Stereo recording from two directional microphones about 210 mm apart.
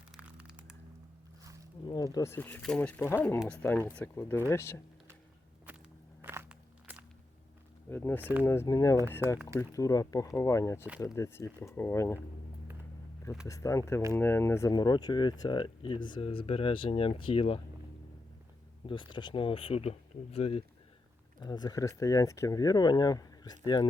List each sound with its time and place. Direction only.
0.2 s a sound: 5° right (ahead or behind)
2.1 s speech: 10° left (ahead or behind)
6.2 s walk: 10° right (ahead or behind)
7.9 s speech: 10° left (ahead or behind)
8.2 s speech: 10° right (ahead or behind)
8.4 s speech: 15° left (ahead or behind)
13.5 s speech: 15° left (ahead or behind)
18.9 s speech: 20° left (ahead or behind)